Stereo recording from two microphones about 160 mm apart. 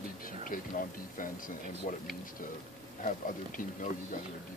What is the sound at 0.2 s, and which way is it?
Speech, 60° left (ahead or behind).